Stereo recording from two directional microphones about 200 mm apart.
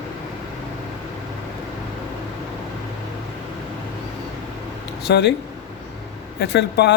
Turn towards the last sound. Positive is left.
turn(degrees=55)  # may be behind; listen again after turning